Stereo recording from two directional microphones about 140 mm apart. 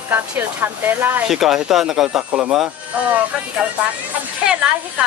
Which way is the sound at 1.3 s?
5° right (ahead or behind).